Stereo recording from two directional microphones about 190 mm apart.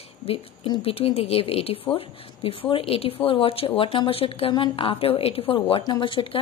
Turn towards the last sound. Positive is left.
turn(degrees=25)  # may be behind; listen again after turning